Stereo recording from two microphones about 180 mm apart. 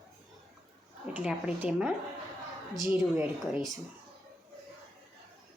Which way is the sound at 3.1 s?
10° right (ahead or behind).